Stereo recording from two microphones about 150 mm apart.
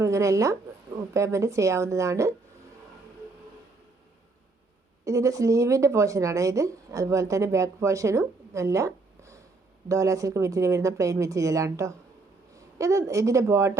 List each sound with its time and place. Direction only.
0.0 s a woman's voice: 20° right (ahead or behind)
5.0 s a woman's voice: 20° right (ahead or behind)